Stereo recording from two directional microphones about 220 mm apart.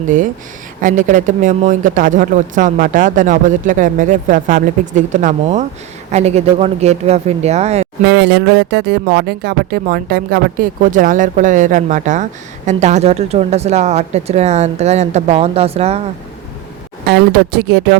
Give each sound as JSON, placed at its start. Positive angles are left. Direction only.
{"t": 0.8, "sound": "speech", "side_deg": -35}
{"t": 8.0, "sound": "speech", "side_deg": -50}
{"t": 17.1, "sound": "speech", "side_deg": -45}